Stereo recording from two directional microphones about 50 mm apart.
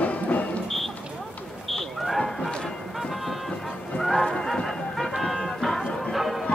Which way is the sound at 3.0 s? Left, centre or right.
Centre.